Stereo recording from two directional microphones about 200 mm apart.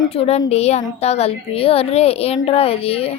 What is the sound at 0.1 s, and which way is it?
A woman's voice, 30° left (ahead or behind).